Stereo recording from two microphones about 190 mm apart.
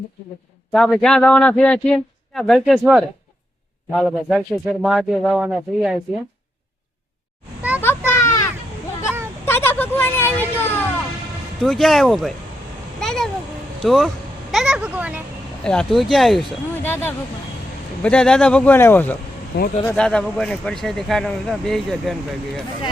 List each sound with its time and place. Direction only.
0.7 s speech: centre (ahead or behind)
7.8 s children playing: 10° left (ahead or behind)
9.5 s a sound: 10° left (ahead or behind)
10.6 s music: 10° left (ahead or behind)
11.6 s speech: centre (ahead or behind)
13.0 s a sound: centre (ahead or behind)
13.8 s speech: centre (ahead or behind)
15.6 s speech: 5° left (ahead or behind)
19.5 s speech: 60° left (ahead or behind)
19.9 s speech: 5° left (ahead or behind)